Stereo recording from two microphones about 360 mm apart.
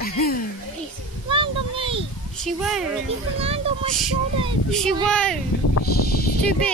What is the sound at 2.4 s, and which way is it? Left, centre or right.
Speech, centre.